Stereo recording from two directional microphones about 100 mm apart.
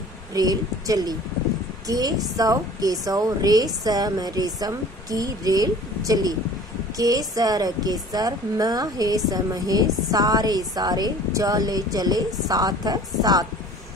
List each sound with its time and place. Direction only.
0.3 s a woman's voice: 40° right (ahead or behind)